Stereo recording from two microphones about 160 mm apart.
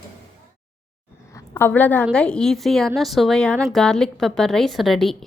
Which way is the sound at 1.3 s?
15° left (ahead or behind).